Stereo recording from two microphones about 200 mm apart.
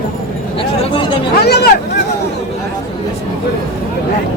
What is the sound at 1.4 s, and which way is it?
Speech, 55° left (ahead or behind).